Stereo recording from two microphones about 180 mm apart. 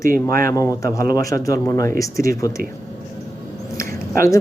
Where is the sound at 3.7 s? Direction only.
15° left (ahead or behind).